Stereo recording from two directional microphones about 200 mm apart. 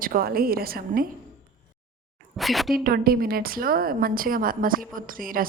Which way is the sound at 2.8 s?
50° right (ahead or behind).